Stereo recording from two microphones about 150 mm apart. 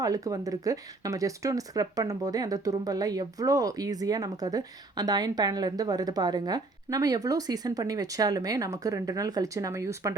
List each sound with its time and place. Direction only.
0.0 s speech: 25° right (ahead or behind)